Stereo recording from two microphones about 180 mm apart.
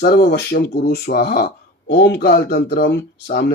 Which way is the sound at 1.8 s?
75° left (ahead or behind).